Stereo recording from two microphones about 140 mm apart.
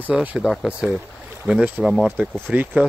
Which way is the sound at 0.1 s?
10° right (ahead or behind).